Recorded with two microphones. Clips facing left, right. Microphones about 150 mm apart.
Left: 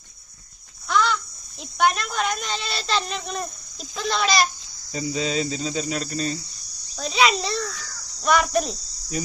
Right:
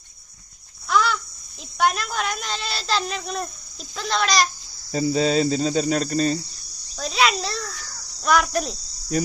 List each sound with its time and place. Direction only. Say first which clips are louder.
0.9 s a sound: right 1 dB; 5° right (ahead or behind)
1.8 s speech: left 1 dB; centre (ahead or behind)
4.9 s cricket: right 6 dB; 40° right (ahead or behind)
6.9 s insect: left 1 dB; centre (ahead or behind)
8.2 s speech: even; centre (ahead or behind)